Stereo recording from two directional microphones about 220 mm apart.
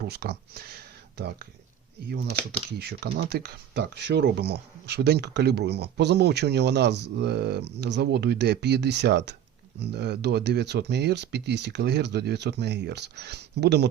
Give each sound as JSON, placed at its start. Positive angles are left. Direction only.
{"t": 0.0, "sound": "speech", "side_deg": -45}